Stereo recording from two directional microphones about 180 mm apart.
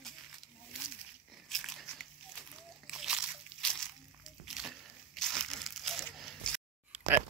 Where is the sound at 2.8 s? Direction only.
5° right (ahead or behind).